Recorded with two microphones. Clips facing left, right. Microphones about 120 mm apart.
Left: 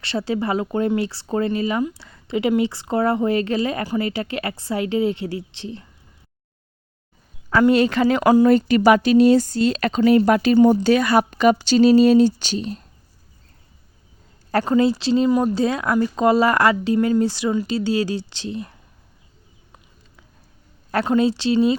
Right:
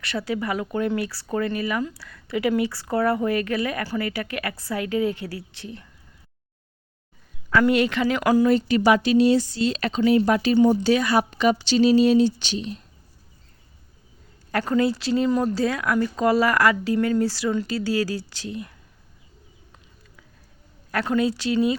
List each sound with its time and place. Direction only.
0.0 s speech: 25° left (ahead or behind)
7.7 s speech: 35° left (ahead or behind)
8.2 s speech: 25° left (ahead or behind)
8.4 s speech: 55° left (ahead or behind)
14.6 s speech: 25° left (ahead or behind)
15.3 s speech: 10° left (ahead or behind)
15.5 s speech: 20° left (ahead or behind)
20.9 s speech: 25° left (ahead or behind)